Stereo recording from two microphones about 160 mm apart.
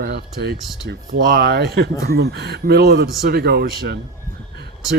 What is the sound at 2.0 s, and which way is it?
Speech, 75° right (ahead or behind).